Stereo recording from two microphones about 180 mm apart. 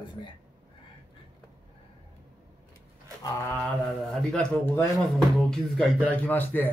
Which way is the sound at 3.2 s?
15° left (ahead or behind).